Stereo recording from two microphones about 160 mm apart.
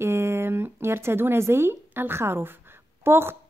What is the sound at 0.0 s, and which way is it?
A woman's voice, 15° right (ahead or behind).